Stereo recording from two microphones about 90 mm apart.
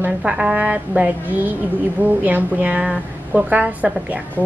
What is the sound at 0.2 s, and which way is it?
A woman's voice, 10° right (ahead or behind).